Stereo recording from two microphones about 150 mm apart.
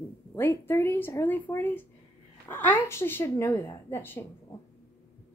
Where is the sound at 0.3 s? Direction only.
15° left (ahead or behind).